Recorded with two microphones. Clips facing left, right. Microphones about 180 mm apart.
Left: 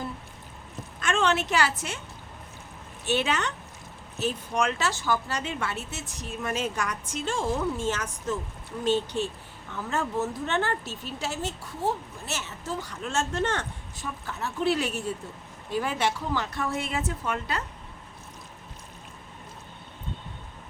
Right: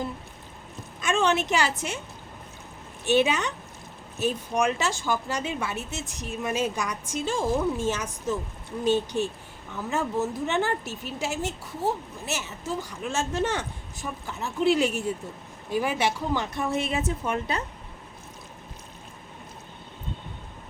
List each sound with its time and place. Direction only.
1.0 s a woman's voice: 10° right (ahead or behind)
3.1 s speech: 15° right (ahead or behind)